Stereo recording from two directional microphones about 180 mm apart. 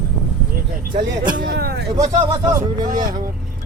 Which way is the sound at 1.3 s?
60° right (ahead or behind).